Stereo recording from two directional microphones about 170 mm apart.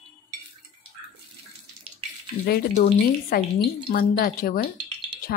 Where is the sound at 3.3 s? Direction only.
65° left (ahead or behind).